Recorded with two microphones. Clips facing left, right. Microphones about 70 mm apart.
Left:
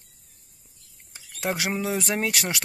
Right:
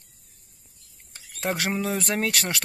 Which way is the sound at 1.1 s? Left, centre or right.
Centre.